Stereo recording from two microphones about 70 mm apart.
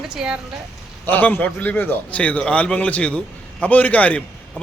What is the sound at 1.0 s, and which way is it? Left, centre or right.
A man's voice, left.